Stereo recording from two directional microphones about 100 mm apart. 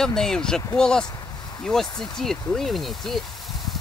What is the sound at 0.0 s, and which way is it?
Speech, 5° left (ahead or behind).